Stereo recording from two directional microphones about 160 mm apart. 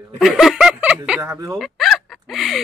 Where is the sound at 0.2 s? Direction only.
Centre (ahead or behind).